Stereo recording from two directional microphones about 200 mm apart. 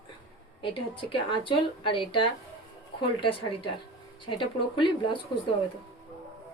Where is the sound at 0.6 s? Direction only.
25° left (ahead or behind).